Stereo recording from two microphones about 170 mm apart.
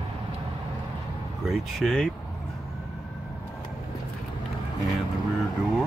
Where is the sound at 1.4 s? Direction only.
Centre (ahead or behind).